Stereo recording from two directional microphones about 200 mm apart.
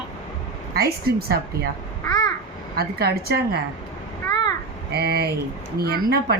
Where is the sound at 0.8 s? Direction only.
50° right (ahead or behind).